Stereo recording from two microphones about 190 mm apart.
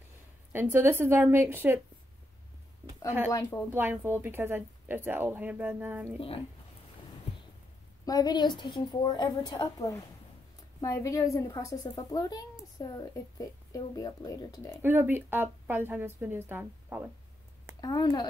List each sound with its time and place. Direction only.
0.5 s speech: 10° right (ahead or behind)
3.7 s speech: 10° right (ahead or behind)
8.0 s a woman's voice: 20° left (ahead or behind)
14.8 s speech: 10° right (ahead or behind)
17.7 s a woman's voice: 20° left (ahead or behind)